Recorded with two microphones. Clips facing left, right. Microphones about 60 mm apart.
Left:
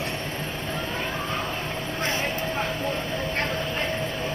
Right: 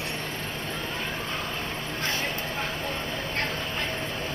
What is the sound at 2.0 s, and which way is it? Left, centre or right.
Vehicle, left.